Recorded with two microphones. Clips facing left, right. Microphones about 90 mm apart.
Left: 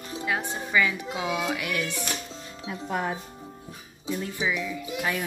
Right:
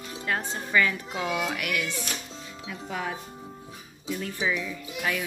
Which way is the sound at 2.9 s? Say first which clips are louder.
Left 3 dB; 40° left (ahead or behind).